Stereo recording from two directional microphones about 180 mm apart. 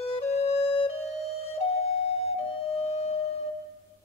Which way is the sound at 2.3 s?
35° left (ahead or behind).